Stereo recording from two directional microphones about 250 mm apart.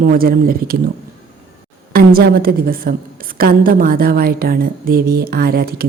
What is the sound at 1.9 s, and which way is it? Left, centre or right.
A woman's voice, right.